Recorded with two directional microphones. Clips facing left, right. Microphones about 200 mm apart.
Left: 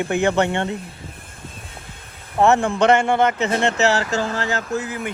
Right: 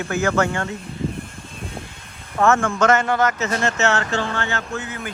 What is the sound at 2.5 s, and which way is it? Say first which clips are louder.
Speech: left 1 dB; 35° left (ahead or behind).